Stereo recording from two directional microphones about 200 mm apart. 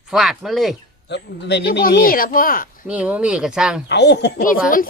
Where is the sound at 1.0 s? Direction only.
60° left (ahead or behind).